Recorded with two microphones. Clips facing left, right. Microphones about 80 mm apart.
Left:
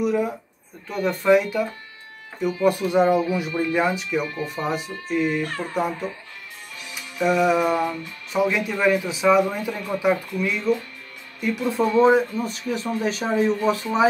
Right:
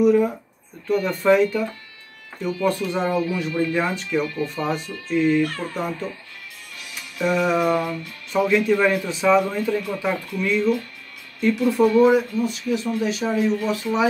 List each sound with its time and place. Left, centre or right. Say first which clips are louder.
0.0 s speech: right 5 dB; centre
7.2 s speech: left 1 dB; centre
11.4 s speech: right 4 dB; left